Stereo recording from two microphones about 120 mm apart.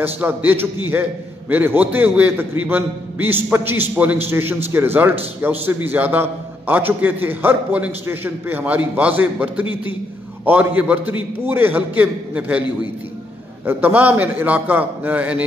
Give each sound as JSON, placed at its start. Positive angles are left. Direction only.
{"t": 0.0, "sound": "a man's voice", "side_deg": -15}
{"t": 13.7, "sound": "a man's voice", "side_deg": -15}